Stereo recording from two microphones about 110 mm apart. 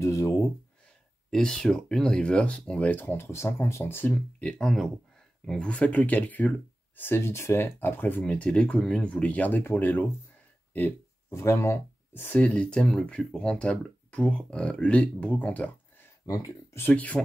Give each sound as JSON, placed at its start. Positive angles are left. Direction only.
{"t": 0.0, "sound": "speech", "side_deg": 25}
{"t": 1.3, "sound": "speech", "side_deg": 5}
{"t": 16.3, "sound": "speech", "side_deg": 25}
{"t": 16.9, "sound": "speech", "side_deg": 15}